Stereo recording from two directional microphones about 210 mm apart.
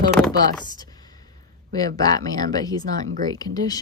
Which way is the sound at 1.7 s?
15° left (ahead or behind).